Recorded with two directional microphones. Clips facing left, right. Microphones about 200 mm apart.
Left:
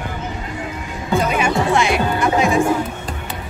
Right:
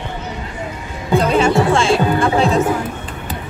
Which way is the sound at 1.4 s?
20° left (ahead or behind).